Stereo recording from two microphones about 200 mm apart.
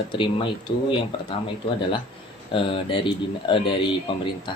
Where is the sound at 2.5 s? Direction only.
25° left (ahead or behind).